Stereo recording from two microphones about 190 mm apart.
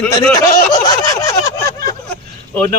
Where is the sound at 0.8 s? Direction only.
15° left (ahead or behind).